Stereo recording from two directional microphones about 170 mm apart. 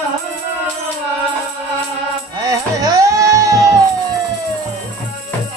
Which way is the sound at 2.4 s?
20° right (ahead or behind).